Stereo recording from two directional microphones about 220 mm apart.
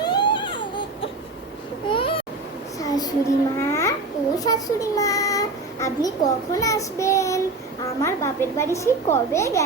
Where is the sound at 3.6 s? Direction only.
10° left (ahead or behind).